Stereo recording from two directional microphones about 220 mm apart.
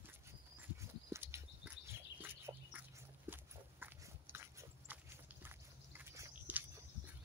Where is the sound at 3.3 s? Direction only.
10° right (ahead or behind).